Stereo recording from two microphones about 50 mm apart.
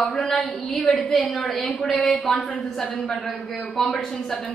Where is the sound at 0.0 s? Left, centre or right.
Left.